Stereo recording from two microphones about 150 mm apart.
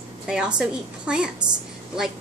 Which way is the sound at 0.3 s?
5° right (ahead or behind).